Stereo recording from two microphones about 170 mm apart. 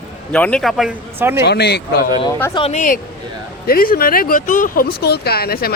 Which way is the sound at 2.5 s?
30° left (ahead or behind).